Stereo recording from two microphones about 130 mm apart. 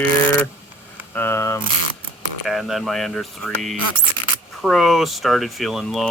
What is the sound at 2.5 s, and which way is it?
Speech, centre (ahead or behind).